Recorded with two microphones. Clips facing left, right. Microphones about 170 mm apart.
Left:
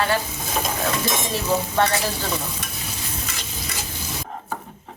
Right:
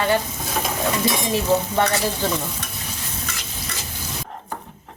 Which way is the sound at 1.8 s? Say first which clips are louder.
Left 4 dB; 15° right (ahead or behind).